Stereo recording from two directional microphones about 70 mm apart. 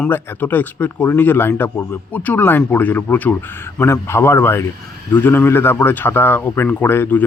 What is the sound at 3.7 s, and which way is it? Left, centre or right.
Speech, left.